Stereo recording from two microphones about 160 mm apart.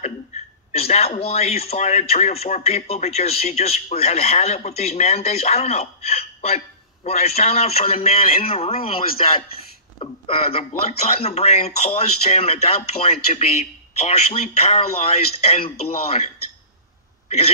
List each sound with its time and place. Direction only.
0.7 s a man's voice: 40° left (ahead or behind)